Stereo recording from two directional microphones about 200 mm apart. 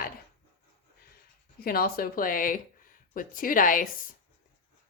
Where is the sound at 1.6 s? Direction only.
50° left (ahead or behind).